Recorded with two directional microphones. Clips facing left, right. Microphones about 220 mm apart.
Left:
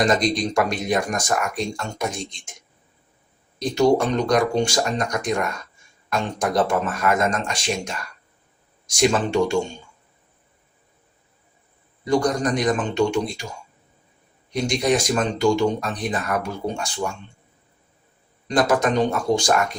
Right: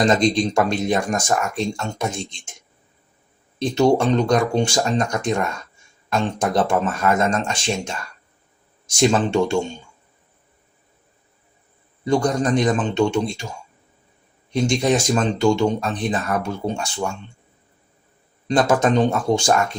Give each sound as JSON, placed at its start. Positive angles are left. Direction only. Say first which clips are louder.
{"t": 0.0, "sound": "speech", "louder": "right 3 dB", "side_deg": -25}
{"t": 3.6, "sound": "speech", "louder": "right 1 dB", "side_deg": -25}
{"t": 9.0, "sound": "speech", "louder": "right 2 dB", "side_deg": -25}
{"t": 12.0, "sound": "speech", "louder": "right 1 dB", "side_deg": -25}
{"t": 14.7, "sound": "speech", "louder": "right 1 dB", "side_deg": -25}
{"t": 18.4, "sound": "speech", "louder": "right 2 dB", "side_deg": -30}